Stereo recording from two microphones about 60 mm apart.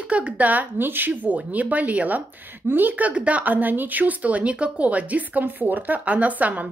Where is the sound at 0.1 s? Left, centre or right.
Right.